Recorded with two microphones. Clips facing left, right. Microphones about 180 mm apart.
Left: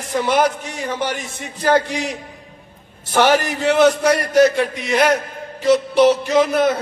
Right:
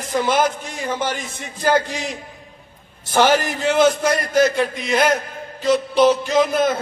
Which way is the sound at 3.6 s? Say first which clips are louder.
Left 3 dB; 65° left (ahead or behind).